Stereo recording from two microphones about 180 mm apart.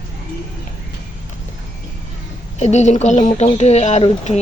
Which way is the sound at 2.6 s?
40° left (ahead or behind).